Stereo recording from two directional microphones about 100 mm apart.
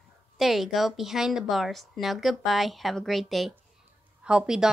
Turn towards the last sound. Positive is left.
turn(degrees=-10)  # may be behind; listen again after turning